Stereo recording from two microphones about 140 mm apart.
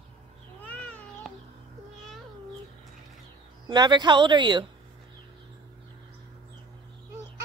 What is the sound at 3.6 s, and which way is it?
Speech, 30° right (ahead or behind).